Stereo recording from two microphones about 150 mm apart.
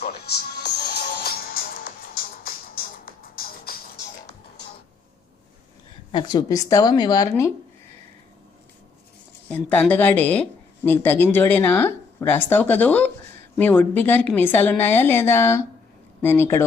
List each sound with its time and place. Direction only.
0.0 s music: 90° left
6.1 s a woman's voice: 30° left (ahead or behind)
9.9 s speech: 10° left (ahead or behind)